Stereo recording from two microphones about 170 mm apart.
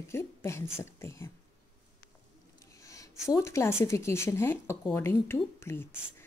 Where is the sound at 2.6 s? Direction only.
20° left (ahead or behind).